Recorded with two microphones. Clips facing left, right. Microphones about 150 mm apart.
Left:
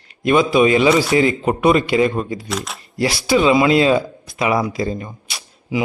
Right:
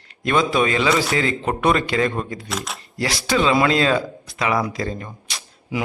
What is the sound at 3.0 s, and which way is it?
Speech, 10° left (ahead or behind).